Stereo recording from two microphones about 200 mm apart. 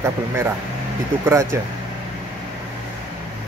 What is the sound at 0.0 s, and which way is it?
Speech, 15° right (ahead or behind).